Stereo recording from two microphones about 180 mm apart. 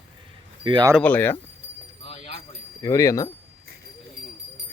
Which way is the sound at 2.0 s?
30° left (ahead or behind).